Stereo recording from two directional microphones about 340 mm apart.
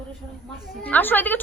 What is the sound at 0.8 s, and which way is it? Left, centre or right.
Speech, centre.